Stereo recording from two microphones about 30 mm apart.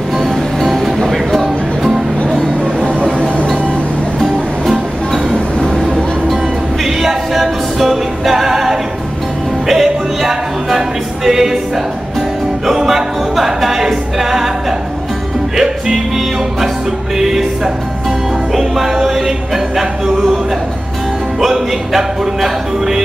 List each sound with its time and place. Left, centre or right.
0.2 s music: centre
3.0 s vehicle: right
4.2 s music: centre
6.8 s music: centre
11.2 s speech: centre
12.6 s music: centre
15.5 s music: centre
17.2 s speech: centre
18.5 s music: centre
19.2 s speech: centre
21.4 s speech: centre